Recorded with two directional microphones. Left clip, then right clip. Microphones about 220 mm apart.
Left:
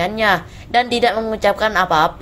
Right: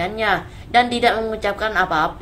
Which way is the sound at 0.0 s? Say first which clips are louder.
Left 4 dB; 35° left (ahead or behind).